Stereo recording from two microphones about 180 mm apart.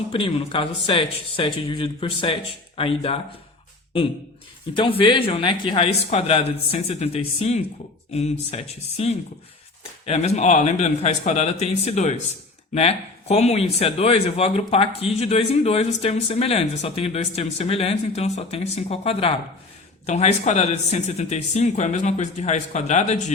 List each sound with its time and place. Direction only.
0.1 s speech: 30° left (ahead or behind)
4.8 s speech: 30° left (ahead or behind)